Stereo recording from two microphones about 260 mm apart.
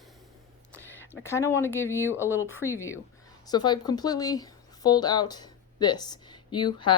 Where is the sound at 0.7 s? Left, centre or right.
Centre.